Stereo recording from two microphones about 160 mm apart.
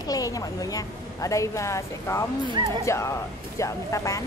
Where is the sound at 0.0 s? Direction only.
20° left (ahead or behind).